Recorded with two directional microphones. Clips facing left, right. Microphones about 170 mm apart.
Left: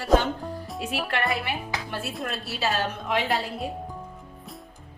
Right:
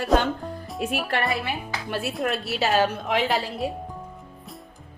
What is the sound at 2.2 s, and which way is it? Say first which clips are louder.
Speech: right 4 dB; 75° right (ahead or behind).